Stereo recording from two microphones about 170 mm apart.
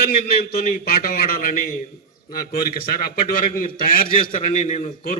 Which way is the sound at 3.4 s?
55° left (ahead or behind).